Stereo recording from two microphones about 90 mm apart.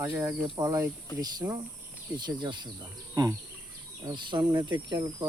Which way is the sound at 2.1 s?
55° right (ahead or behind).